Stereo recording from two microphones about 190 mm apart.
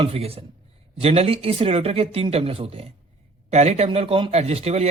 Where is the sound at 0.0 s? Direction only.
30° right (ahead or behind).